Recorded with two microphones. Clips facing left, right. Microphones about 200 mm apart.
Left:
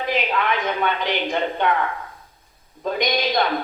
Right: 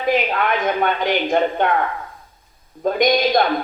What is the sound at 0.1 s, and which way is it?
Speech, 50° right (ahead or behind).